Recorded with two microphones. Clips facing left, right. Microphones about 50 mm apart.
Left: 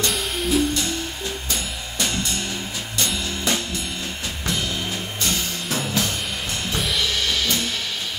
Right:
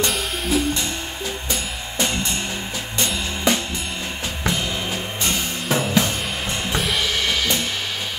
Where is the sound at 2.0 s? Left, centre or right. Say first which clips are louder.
Right 2 dB; right.